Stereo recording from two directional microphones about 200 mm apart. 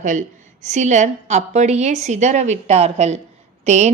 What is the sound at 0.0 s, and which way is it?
Speech, 35° right (ahead or behind).